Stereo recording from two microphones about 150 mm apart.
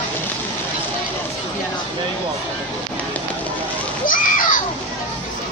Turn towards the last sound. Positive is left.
turn(degrees=65)  # may be behind; listen again after turning